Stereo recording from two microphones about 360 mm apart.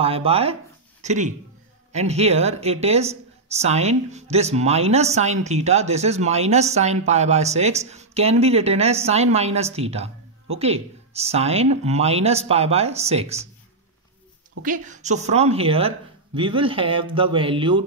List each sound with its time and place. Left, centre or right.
0.0 s speech: centre
14.6 s a woman's voice: right